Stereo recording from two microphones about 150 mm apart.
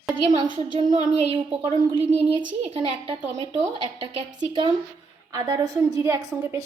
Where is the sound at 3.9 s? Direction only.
35° right (ahead or behind).